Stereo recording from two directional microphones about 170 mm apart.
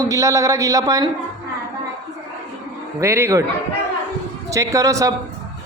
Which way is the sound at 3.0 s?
15° right (ahead or behind).